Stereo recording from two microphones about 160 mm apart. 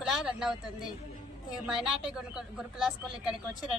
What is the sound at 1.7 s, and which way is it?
Speech, 5° right (ahead or behind).